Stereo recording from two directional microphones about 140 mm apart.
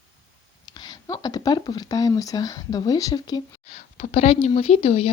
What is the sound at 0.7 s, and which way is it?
Speech, 30° left (ahead or behind).